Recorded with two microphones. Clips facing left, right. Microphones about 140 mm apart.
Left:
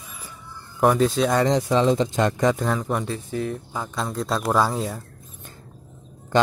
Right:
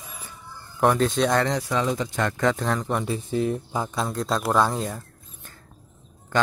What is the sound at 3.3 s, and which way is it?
Speech, 20° right (ahead or behind).